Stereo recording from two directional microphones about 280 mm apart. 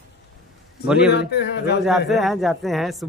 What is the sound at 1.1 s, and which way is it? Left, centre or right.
Speech, left.